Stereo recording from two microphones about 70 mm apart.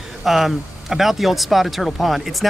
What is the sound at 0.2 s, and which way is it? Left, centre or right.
Speech, centre.